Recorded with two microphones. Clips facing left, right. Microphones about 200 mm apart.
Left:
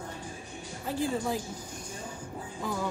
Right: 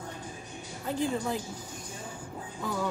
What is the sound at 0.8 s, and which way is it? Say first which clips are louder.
Speech: even; 5° left (ahead or behind).